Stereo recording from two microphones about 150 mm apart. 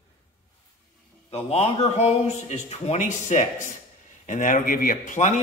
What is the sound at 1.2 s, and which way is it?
A man's voice, 45° left (ahead or behind).